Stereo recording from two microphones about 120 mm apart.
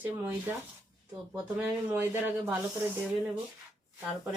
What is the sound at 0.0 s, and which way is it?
Speech, 15° right (ahead or behind).